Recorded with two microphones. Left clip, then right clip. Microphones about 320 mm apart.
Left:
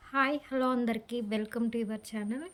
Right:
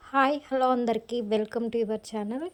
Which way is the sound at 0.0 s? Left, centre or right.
Centre.